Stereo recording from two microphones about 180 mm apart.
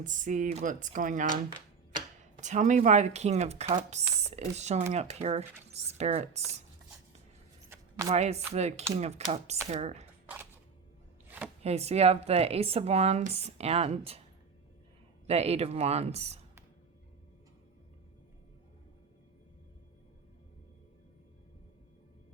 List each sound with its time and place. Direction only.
0.0 s speech: 45° right (ahead or behind)
2.4 s speech: 40° right (ahead or behind)
8.1 s speech: 35° right (ahead or behind)
11.6 s speech: 35° right (ahead or behind)
15.3 s speech: 35° right (ahead or behind)